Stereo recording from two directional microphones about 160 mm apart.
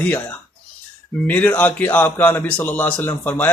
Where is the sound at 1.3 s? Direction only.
10° left (ahead or behind).